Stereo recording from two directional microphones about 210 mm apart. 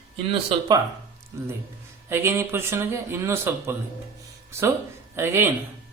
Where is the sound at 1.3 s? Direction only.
15° right (ahead or behind).